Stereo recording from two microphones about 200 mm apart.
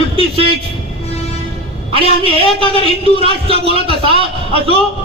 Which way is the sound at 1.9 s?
30° right (ahead or behind).